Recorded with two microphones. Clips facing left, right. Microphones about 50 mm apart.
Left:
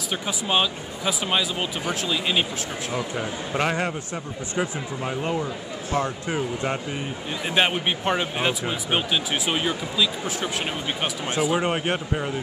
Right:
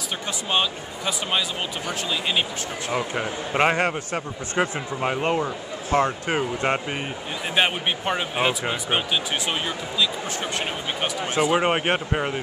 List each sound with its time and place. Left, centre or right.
0.5 s speech: centre
2.9 s a man's voice: right
7.5 s speech: centre
11.5 s speech: right